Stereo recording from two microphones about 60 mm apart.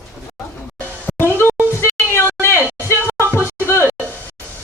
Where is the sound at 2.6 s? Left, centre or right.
Right.